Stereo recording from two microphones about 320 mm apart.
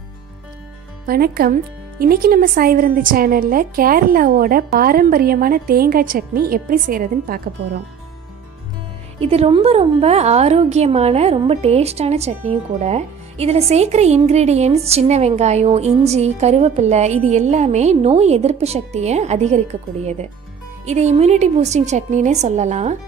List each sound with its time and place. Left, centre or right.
1.0 s a woman's voice: right
9.2 s a woman's voice: centre